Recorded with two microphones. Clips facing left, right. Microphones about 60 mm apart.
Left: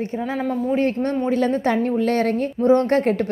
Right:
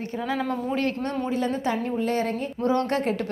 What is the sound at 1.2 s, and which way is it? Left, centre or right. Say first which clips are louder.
A woman's voice: left 6 dB; left.